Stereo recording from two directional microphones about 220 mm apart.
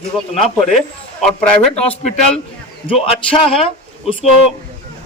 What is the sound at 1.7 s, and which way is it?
Speech, 30° left (ahead or behind).